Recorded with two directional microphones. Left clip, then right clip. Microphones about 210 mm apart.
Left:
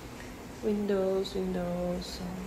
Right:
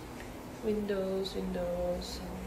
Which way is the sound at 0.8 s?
20° left (ahead or behind).